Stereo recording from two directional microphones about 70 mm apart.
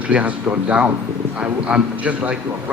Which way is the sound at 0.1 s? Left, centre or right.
Centre.